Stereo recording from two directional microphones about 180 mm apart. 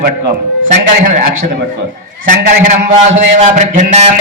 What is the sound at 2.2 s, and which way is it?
A man's voice, 40° right (ahead or behind).